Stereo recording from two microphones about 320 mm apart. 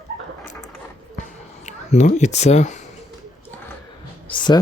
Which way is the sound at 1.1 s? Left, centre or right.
Left.